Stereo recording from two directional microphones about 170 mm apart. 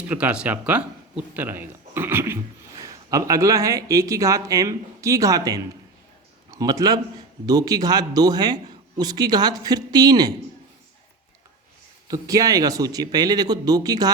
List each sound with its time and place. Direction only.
0.1 s a man's voice: 10° right (ahead or behind); by 10.3 s 25° right (ahead or behind)
12.0 s a man's voice: 20° right (ahead or behind)